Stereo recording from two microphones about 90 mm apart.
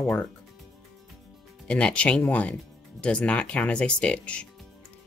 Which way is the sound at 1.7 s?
10° left (ahead or behind).